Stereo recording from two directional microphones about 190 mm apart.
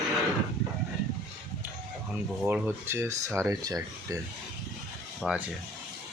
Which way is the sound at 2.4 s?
10° right (ahead or behind).